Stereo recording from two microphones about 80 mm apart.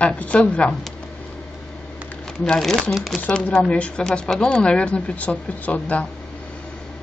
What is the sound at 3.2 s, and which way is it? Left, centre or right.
Speech, centre.